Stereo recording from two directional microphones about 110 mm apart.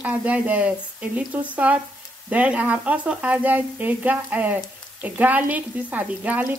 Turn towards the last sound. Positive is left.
turn(degrees=-15)  # may be behind; listen again after turning